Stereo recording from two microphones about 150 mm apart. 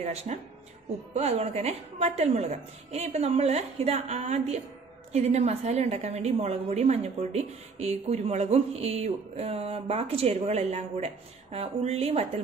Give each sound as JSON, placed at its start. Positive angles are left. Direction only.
{"t": 0.0, "sound": "a woman's voice", "side_deg": -50}